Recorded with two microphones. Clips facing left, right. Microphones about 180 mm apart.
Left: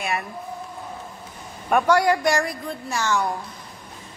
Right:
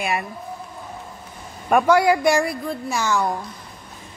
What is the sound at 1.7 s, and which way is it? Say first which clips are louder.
A woman's voice: right 2 dB; 5° right (ahead or behind).